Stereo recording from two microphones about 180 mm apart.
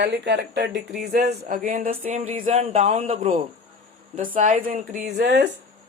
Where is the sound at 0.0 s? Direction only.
75° right (ahead or behind); by 3.4 s 40° right (ahead or behind).